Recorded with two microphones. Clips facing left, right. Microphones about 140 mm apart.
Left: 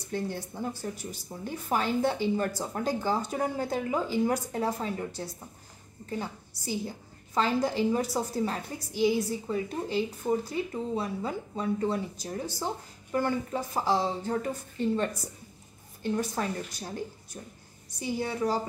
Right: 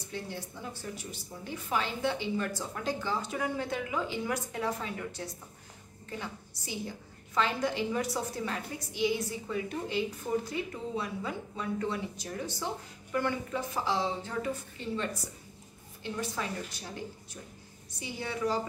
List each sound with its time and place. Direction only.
0.1 s a woman's voice: 45° left (ahead or behind)
10.3 s speech: 25° left (ahead or behind)
11.0 s a woman's voice: 35° left (ahead or behind)
16.0 s a woman's voice: 45° left (ahead or behind)